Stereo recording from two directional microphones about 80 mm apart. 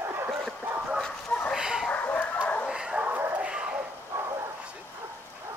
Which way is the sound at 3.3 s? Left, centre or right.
Centre.